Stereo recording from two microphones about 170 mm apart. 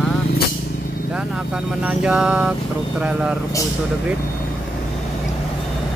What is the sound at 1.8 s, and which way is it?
Mantra, 5° right (ahead or behind).